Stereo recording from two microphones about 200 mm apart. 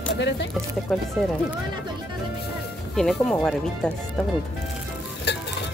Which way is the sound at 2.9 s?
5° left (ahead or behind).